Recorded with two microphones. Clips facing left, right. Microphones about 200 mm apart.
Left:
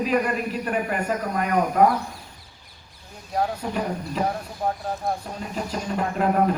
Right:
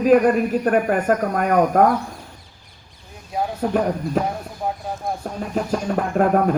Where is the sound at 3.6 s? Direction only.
50° right (ahead or behind).